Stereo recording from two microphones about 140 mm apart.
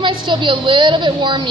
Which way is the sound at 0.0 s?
35° right (ahead or behind).